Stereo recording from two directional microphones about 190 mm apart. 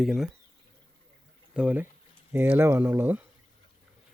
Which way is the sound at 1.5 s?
10° right (ahead or behind).